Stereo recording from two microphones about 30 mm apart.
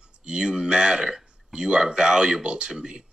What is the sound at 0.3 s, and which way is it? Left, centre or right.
Speech, right.